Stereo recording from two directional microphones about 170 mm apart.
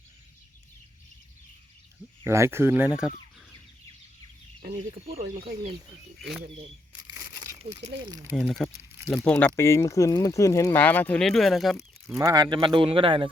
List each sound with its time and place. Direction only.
2.2 s speech: 15° right (ahead or behind)
4.8 s speech: 35° right (ahead or behind)
5.2 s speech: 60° right (ahead or behind)
6.1 s speech: centre (ahead or behind)
7.1 s crumpling: 20° right (ahead or behind)
7.9 s speech: 25° right (ahead or behind)
8.4 s speech: 5° left (ahead or behind)
12.1 s speech: 20° right (ahead or behind)